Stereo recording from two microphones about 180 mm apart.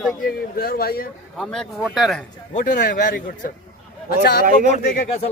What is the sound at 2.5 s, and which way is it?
Speech, 45° left (ahead or behind).